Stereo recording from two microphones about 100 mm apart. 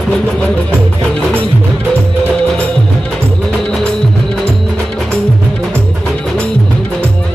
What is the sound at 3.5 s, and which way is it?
Music, 10° left (ahead or behind).